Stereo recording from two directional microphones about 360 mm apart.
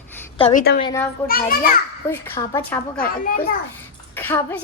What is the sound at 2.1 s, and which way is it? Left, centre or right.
Speech, centre.